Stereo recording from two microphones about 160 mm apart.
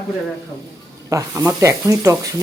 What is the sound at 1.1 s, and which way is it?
Speech, 20° right (ahead or behind).